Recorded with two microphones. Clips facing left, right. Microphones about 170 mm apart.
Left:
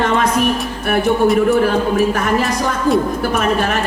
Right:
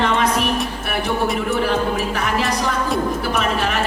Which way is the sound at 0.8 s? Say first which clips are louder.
Left 7 dB; 45° left (ahead or behind).